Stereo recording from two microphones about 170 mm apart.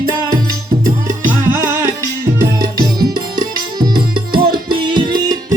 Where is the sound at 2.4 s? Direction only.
25° right (ahead or behind).